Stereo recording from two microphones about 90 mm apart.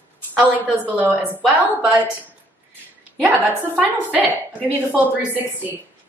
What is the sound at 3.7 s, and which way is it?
A woman's voice, 15° right (ahead or behind).